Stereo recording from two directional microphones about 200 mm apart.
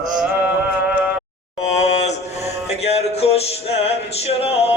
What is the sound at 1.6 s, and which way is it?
Mantra, 35° left (ahead or behind).